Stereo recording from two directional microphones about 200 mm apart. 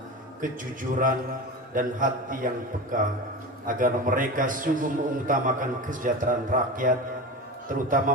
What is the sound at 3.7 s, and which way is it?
A man's voice, 40° right (ahead or behind).